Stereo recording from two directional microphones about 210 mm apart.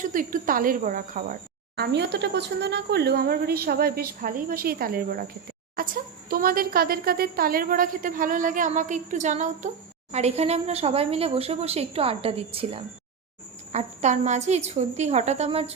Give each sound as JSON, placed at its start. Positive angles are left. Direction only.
{"t": 0.0, "sound": "a woman's voice", "side_deg": -40}